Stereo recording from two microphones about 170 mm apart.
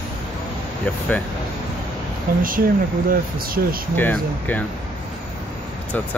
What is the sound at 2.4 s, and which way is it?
Speech, 55° right (ahead or behind).